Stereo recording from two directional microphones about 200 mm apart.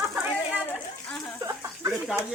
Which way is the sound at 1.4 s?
15° right (ahead or behind).